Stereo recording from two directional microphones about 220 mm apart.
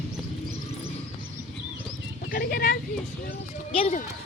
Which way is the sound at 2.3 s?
45° left (ahead or behind).